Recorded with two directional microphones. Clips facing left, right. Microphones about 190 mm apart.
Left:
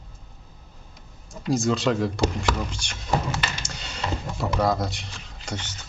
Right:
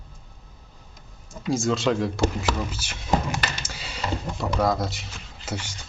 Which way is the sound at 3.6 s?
5° right (ahead or behind).